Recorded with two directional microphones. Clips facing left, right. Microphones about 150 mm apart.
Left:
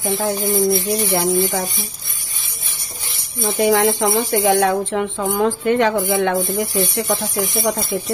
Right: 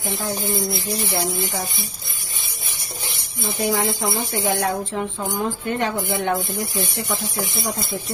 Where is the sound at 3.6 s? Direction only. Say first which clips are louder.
Left 7 dB; 80° left.